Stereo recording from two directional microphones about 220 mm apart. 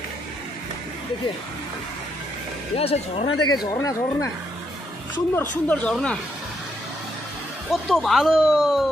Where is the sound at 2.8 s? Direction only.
25° left (ahead or behind).